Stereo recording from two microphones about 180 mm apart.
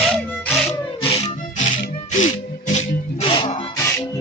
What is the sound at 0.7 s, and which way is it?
Music, 35° left (ahead or behind).